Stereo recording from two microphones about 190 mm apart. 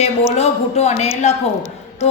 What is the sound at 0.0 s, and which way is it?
A woman's voice, 35° left (ahead or behind).